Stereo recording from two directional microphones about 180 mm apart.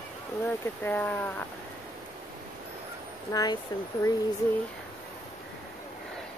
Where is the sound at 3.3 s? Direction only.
20° left (ahead or behind).